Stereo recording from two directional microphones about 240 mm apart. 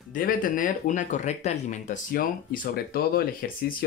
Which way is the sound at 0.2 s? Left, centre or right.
Left.